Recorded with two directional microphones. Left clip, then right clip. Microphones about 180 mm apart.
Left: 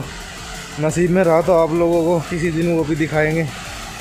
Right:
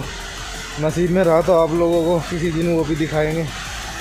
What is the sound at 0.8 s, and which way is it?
Speech, 10° left (ahead or behind).